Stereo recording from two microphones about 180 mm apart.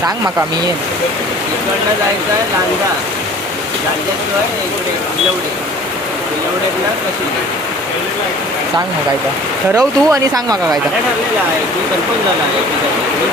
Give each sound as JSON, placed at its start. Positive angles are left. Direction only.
{"t": 9.7, "sound": "speech", "side_deg": -20}